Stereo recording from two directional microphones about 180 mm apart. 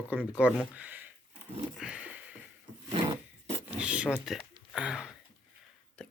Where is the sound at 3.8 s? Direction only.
5° right (ahead or behind).